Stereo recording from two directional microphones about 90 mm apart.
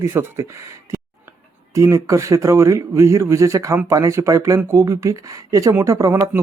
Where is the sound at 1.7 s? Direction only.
35° right (ahead or behind).